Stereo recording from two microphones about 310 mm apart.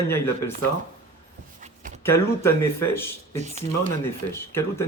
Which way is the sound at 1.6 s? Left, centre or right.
Right.